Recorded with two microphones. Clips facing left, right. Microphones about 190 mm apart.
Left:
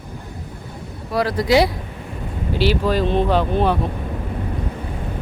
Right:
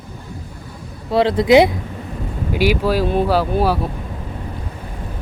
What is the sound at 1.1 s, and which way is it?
Speech, 25° right (ahead or behind).